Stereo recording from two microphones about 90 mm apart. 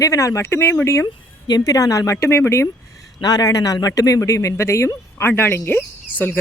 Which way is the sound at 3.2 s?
45° left (ahead or behind).